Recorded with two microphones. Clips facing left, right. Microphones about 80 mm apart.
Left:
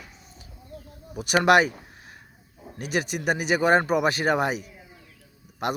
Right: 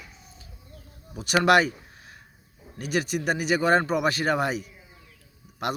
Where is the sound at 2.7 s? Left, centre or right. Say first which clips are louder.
Right 1 dB; centre.